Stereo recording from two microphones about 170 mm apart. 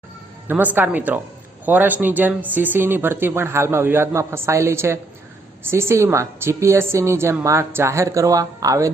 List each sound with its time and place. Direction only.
0.4 s speech: 10° right (ahead or behind)